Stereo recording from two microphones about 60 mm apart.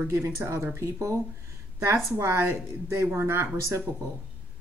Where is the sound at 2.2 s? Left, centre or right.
Right.